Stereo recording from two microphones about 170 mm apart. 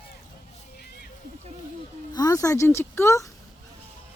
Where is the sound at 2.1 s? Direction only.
20° left (ahead or behind).